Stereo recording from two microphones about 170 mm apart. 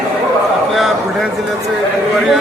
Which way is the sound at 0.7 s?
Centre (ahead or behind).